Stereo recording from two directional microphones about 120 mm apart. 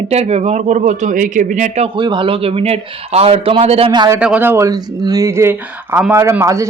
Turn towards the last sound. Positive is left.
turn(degrees=-25)  # may be behind; listen again after turning